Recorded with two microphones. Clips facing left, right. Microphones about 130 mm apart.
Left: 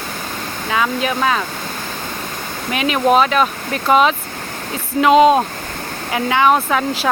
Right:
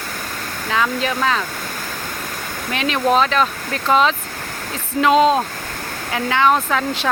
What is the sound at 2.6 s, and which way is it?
Speech, 10° left (ahead or behind).